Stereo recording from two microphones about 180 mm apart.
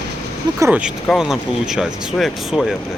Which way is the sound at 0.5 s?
15° right (ahead or behind).